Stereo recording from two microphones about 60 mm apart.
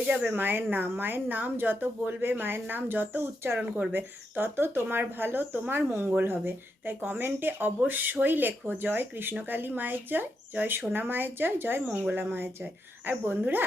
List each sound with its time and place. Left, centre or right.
0.3 s speech: right
3.6 s speech: right
3.9 s speech: right